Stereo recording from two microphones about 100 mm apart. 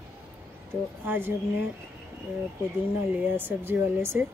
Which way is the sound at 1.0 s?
20° right (ahead or behind).